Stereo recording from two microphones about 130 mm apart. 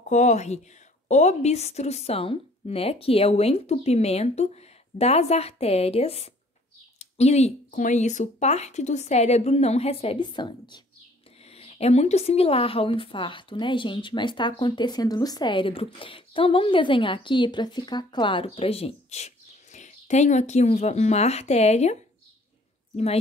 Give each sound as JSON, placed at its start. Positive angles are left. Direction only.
{"t": 0.1, "sound": "speech", "side_deg": 60}
{"t": 11.5, "sound": "speech", "side_deg": 50}